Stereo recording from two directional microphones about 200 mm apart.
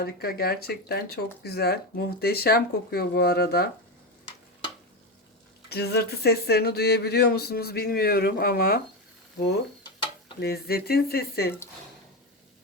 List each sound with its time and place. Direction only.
0.0 s speech: 50° left (ahead or behind)
5.6 s speech: 55° left (ahead or behind)
9.8 s stir: 20° left (ahead or behind)
10.4 s speech: 50° left (ahead or behind)